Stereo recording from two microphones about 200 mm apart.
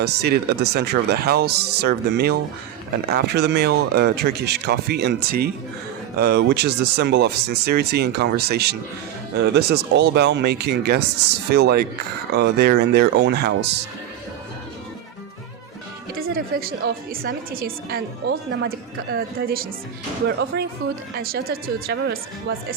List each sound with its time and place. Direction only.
0.0 s a woman's voice: 55° right (ahead or behind)
16.1 s a woman's voice: 45° right (ahead or behind)
21.9 s speech: 60° right (ahead or behind)